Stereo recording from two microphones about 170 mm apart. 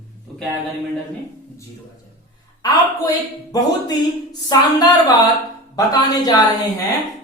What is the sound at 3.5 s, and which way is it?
Speech, 20° left (ahead or behind).